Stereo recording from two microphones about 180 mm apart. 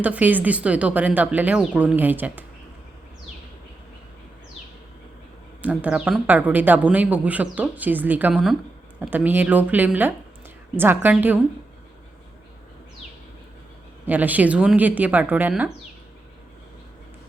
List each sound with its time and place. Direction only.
0.0 s speech: 10° right (ahead or behind)
5.6 s speech: 5° right (ahead or behind)
14.1 s speech: 10° right (ahead or behind)